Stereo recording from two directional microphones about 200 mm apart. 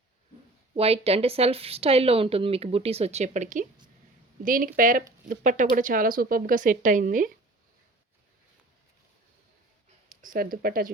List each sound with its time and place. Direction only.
0.8 s speech: 30° right (ahead or behind)
10.1 s speech: 45° right (ahead or behind)